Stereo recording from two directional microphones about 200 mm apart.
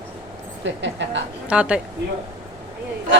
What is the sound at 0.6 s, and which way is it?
Speech, 65° right (ahead or behind).